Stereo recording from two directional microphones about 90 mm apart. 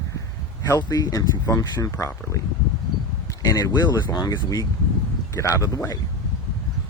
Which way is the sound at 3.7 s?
55° left (ahead or behind).